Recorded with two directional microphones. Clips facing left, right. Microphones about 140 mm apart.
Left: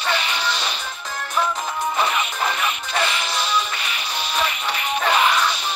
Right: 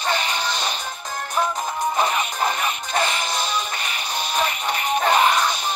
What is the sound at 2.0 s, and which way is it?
Music, 40° right (ahead or behind).